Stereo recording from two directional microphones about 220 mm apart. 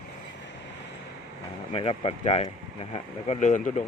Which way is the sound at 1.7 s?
25° left (ahead or behind).